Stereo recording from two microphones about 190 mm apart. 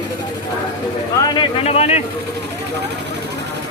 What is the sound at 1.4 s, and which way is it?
Speech, 30° left (ahead or behind).